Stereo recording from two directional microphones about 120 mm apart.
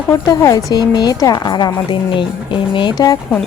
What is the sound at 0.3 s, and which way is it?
A woman's voice, 30° left (ahead or behind).